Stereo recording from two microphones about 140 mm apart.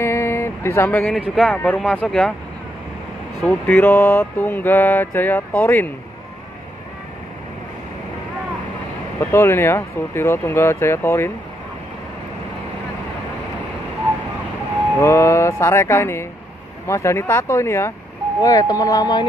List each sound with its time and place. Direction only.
0.0 s a sound: 20° left (ahead or behind)
1.3 s mantra: 5° left (ahead or behind)
1.8 s speech: 5° right (ahead or behind)
3.4 s mantra: 15° left (ahead or behind)
9.2 s mantra: 15° left (ahead or behind)
15.0 s speech: 20° left (ahead or behind)